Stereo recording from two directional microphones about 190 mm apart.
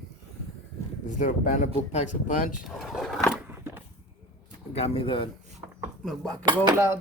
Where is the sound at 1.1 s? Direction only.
45° left (ahead or behind).